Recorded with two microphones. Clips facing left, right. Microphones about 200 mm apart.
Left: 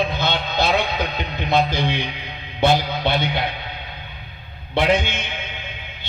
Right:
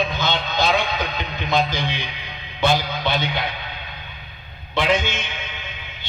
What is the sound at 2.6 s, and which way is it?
Music, 55° left (ahead or behind).